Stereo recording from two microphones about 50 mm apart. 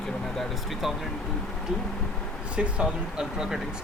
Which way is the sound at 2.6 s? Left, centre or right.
Centre.